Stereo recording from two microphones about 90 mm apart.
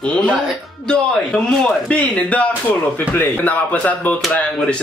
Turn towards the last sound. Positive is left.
turn(degrees=10)  # may be behind; listen again after turning